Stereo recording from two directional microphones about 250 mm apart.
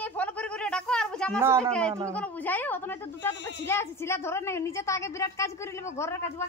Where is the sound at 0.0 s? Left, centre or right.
Centre.